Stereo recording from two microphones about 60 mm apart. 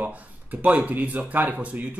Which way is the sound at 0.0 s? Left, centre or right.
Right.